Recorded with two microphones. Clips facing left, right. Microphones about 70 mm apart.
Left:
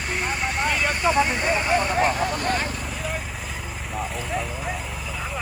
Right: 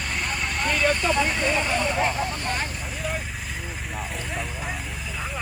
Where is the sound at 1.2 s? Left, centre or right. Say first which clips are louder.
Left 2 dB; centre.